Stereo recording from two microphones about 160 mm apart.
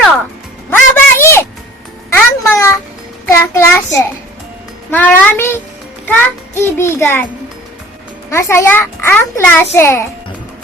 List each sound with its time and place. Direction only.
0.7 s a sound: 15° left (ahead or behind)
3.2 s child singing: 20° left (ahead or behind)
4.9 s a child's voice: 10° left (ahead or behind)
8.3 s a child's voice: 15° left (ahead or behind)